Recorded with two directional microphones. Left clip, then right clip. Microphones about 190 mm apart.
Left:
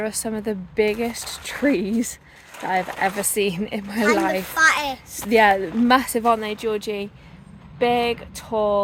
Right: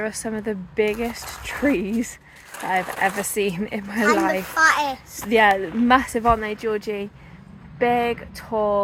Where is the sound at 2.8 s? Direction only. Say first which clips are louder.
Even; 45° right (ahead or behind).